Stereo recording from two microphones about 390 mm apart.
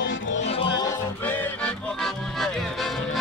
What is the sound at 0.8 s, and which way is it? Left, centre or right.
Music, centre.